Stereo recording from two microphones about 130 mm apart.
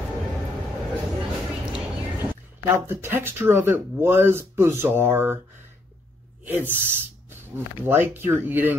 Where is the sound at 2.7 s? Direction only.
20° right (ahead or behind).